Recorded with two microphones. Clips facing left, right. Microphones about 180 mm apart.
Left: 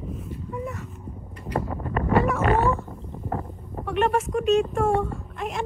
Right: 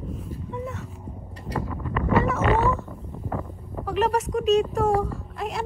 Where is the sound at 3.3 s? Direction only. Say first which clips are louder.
Left 1 dB; 40° left (ahead or behind).